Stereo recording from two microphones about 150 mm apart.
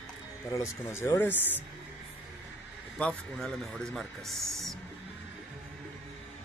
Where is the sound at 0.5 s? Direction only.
15° left (ahead or behind).